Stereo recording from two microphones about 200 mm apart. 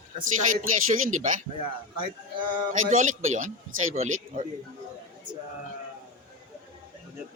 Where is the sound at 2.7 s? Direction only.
40° right (ahead or behind).